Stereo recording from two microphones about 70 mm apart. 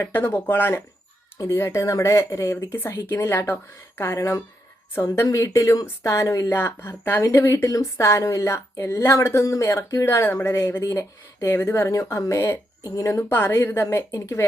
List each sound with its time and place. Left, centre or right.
0.0 s speech: left
1.4 s speech: left
4.2 s speech: left
6.5 s speech: left
7.2 s speech: left
11.5 s speech: left
13.2 s speech: left
14.1 s speech: left